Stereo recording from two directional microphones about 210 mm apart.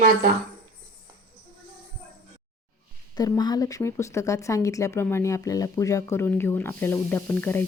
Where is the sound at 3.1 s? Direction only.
15° left (ahead or behind).